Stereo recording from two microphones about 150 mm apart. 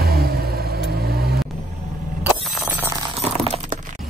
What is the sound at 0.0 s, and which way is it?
Vehicle, 90° right.